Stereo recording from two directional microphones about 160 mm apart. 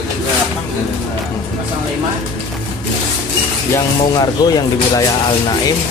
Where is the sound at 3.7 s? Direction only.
25° left (ahead or behind).